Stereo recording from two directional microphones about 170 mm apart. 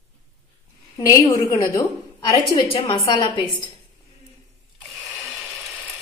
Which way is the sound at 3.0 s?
25° left (ahead or behind).